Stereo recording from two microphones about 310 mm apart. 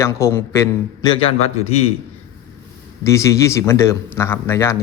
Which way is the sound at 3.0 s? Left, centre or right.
Centre.